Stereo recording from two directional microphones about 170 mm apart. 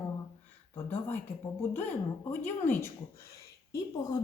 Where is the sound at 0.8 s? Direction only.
10° left (ahead or behind).